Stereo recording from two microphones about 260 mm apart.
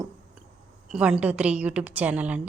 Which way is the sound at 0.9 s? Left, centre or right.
Centre.